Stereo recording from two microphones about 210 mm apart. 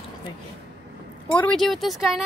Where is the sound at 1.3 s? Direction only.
5° left (ahead or behind).